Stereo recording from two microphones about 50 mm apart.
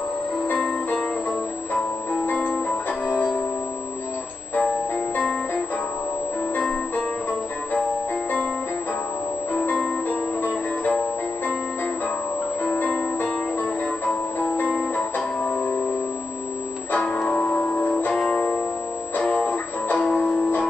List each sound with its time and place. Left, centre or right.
2.2 s music: left
4.6 s music: left
9.5 s music: left
12.7 s music: left
16.9 s music: left